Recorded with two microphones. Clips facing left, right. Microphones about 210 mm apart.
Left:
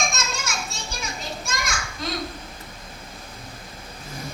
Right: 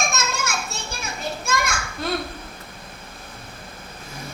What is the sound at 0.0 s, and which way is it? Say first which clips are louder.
Children playing: right 3 dB; 60° right (ahead or behind).